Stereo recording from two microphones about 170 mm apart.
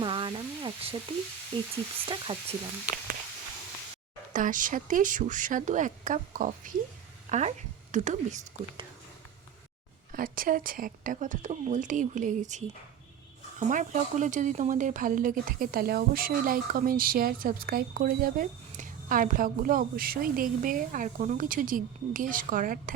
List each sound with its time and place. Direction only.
0.0 s a sound: 30° right (ahead or behind)
1.5 s speech: 30° right (ahead or behind)
4.3 s speech: 50° right (ahead or behind)
10.1 s speech: 55° right (ahead or behind)
13.7 s speech: 45° right (ahead or behind)